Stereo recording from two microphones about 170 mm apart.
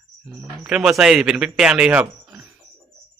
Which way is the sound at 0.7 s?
5° right (ahead or behind).